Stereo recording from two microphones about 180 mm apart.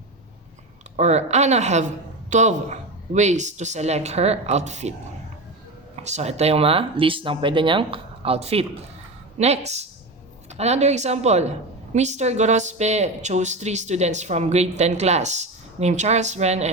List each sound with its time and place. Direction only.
0.9 s a woman's voice: 40° right (ahead or behind)
6.0 s a woman's voice: 40° right (ahead or behind)